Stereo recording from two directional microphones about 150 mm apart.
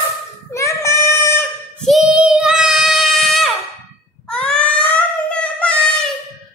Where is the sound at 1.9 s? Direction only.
Centre (ahead or behind).